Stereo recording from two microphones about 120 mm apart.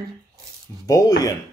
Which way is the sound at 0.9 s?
30° left (ahead or behind).